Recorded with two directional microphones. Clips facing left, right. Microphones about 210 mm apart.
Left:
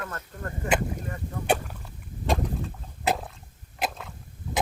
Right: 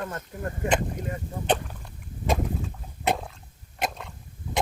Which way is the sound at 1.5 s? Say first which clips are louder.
Even; 10° left (ahead or behind).